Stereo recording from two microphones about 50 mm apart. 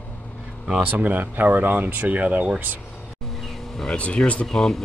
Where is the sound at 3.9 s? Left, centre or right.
Left.